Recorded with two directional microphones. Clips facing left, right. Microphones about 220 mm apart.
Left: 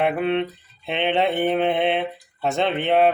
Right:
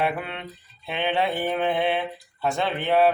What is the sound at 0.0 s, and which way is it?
Speech, 20° left (ahead or behind).